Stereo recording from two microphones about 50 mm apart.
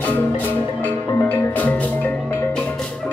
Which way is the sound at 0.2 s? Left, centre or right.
Left.